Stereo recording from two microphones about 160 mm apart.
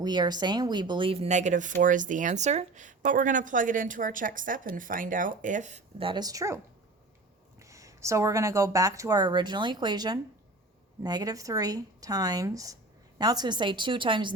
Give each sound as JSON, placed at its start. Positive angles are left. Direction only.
{"t": 0.0, "sound": "speech", "side_deg": -25}
{"t": 6.0, "sound": "speech", "side_deg": -30}
{"t": 7.6, "sound": "speech", "side_deg": -20}